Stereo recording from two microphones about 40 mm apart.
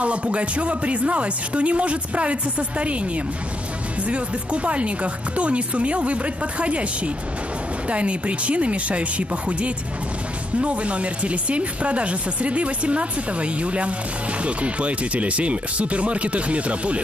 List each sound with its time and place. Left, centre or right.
0.0 s speech: right
4.0 s speech: right
7.9 s speech: right